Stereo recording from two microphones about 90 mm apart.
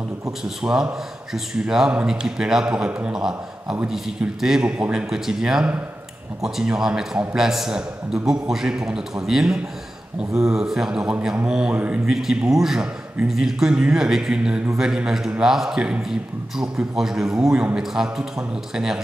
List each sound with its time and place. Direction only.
0.4 s a man's voice: 5° right (ahead or behind)
12.1 s a man's voice: 5° right (ahead or behind)